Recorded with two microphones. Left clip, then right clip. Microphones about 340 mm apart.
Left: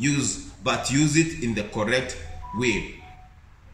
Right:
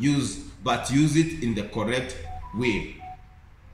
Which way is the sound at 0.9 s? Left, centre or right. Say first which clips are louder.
Left 1 dB; centre.